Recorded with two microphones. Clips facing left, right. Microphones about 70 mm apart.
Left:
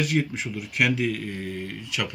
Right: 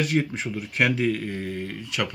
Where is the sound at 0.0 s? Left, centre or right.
Right.